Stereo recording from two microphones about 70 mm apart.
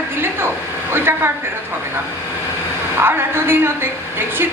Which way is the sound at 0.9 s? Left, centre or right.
Right.